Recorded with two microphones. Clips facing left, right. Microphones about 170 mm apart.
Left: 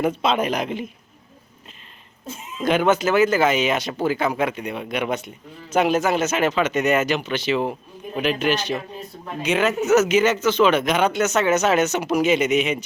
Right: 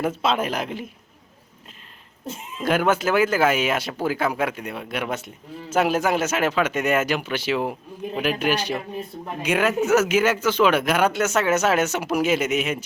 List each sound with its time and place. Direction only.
0.0 s speech: 5° right (ahead or behind)
2.6 s speech: 5° right (ahead or behind)